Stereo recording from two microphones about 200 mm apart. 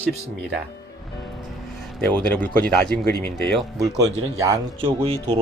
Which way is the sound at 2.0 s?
5° left (ahead or behind).